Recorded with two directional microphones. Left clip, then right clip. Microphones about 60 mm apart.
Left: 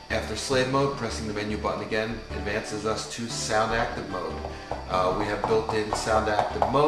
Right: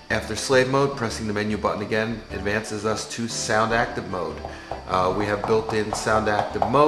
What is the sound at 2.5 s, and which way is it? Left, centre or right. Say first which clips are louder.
Speech: right 4 dB; right.